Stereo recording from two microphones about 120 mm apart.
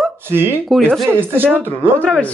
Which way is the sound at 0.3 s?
20° right (ahead or behind).